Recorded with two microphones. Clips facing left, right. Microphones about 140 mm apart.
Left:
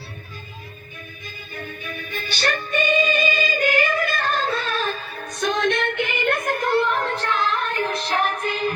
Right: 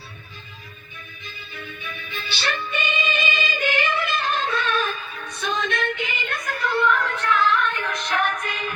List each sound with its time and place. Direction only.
1.5 s music: 45° left (ahead or behind)
5.5 s music: 65° left (ahead or behind)
6.8 s female singing: 35° left (ahead or behind)